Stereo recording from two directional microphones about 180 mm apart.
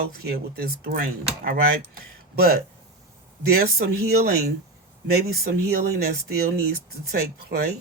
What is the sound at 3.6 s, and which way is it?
Speech, 60° right (ahead or behind).